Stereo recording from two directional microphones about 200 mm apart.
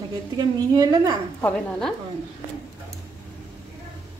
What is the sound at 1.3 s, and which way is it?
Speech, 10° left (ahead or behind).